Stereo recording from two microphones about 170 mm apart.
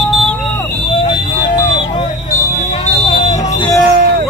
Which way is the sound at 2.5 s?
40° left (ahead or behind).